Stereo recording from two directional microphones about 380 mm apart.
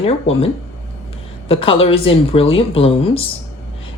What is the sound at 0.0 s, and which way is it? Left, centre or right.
Speech, centre.